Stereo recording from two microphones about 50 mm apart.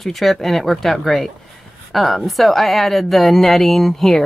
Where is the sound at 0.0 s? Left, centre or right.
Centre.